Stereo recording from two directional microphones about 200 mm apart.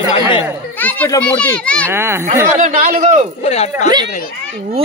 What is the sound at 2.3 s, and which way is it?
Speech, 35° right (ahead or behind).